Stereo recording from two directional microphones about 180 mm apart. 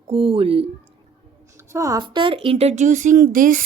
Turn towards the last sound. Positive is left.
turn(degrees=-50)  # may be behind; listen again after turning